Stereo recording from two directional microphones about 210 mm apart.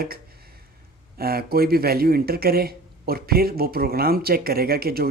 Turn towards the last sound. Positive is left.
turn(degrees=-45)  # may be behind; listen again after turning